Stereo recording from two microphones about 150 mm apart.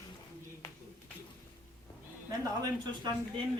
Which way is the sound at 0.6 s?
15° left (ahead or behind).